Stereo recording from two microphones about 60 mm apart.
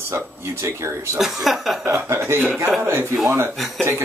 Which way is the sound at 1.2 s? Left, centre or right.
Centre.